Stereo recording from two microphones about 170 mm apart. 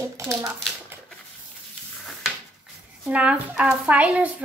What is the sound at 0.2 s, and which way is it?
Speech, 15° right (ahead or behind).